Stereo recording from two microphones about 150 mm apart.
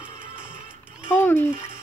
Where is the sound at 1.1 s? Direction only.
15° left (ahead or behind).